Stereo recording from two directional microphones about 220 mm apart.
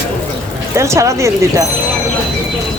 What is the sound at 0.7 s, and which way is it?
Speech, 15° right (ahead or behind).